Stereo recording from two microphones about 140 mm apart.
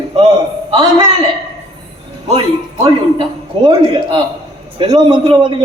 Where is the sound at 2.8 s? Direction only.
35° right (ahead or behind).